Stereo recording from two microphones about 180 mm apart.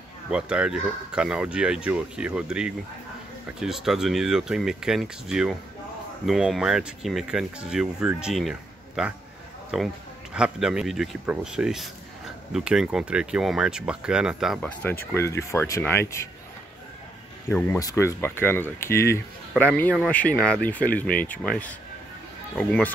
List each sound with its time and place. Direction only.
0.3 s speech: 5° right (ahead or behind)
15.1 s speech: 15° left (ahead or behind)
17.5 s speech: 5° left (ahead or behind)
17.7 s speech: 15° left (ahead or behind)